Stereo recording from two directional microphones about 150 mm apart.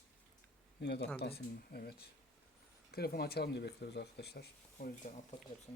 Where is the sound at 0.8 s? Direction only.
90° left; by 5.2 s 70° left (ahead or behind).